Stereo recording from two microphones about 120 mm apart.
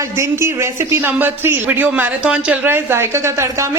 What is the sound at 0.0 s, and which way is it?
A woman's voice, 25° right (ahead or behind).